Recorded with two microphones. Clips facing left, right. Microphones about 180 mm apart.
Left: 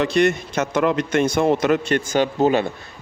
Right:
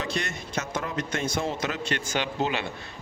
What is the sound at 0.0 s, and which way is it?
A man's voice, 65° left (ahead or behind).